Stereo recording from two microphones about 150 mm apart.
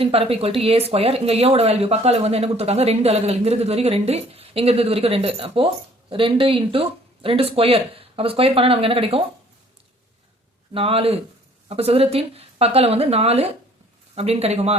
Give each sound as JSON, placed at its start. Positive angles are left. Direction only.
{"t": 0.0, "sound": "speech", "side_deg": -40}
{"t": 10.8, "sound": "speech", "side_deg": -40}